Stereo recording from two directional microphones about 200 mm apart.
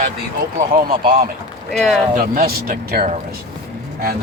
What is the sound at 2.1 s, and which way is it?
A man's voice, 45° right (ahead or behind).